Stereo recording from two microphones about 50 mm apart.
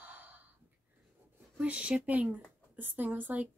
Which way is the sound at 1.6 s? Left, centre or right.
Right.